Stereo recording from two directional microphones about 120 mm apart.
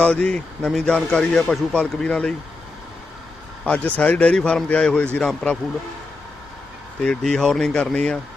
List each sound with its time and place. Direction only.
0.0 s speech: 10° left (ahead or behind)
3.7 s speech: 10° left (ahead or behind)
7.0 s speech: 5° left (ahead or behind)